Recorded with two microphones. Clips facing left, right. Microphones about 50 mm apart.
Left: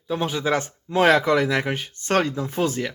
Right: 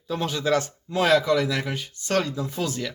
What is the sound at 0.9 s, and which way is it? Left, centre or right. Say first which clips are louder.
Speech: left 3 dB; left.